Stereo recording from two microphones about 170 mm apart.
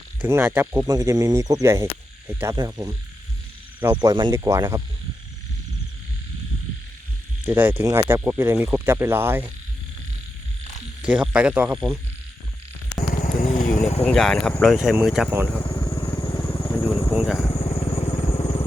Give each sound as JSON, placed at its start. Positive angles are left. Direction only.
{"t": 0.2, "sound": "speech", "side_deg": -10}
{"t": 2.6, "sound": "frog", "side_deg": -20}
{"t": 3.8, "sound": "speech", "side_deg": -10}
{"t": 4.0, "sound": "frog", "side_deg": -25}
{"t": 4.4, "sound": "speech", "side_deg": -15}
{"t": 7.4, "sound": "speech", "side_deg": -10}
{"t": 11.0, "sound": "speech", "side_deg": -5}
{"t": 13.1, "sound": "vehicle", "side_deg": 50}
{"t": 14.0, "sound": "speech", "side_deg": 5}
{"t": 15.8, "sound": "vehicle", "side_deg": 10}
{"t": 16.4, "sound": "a sound", "side_deg": 10}
{"t": 17.5, "sound": "vehicle", "side_deg": 30}